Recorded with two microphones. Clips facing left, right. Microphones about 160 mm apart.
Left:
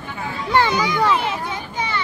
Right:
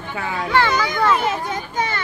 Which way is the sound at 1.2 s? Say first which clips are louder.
Right 2 dB; 45° right (ahead or behind).